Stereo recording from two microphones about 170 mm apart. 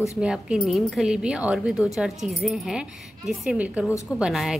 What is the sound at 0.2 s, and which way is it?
Speech, 5° right (ahead or behind).